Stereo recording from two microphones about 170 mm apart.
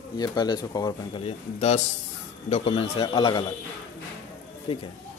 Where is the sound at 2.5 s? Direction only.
35° left (ahead or behind).